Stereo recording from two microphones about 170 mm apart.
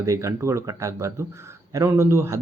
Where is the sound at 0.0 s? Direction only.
20° right (ahead or behind).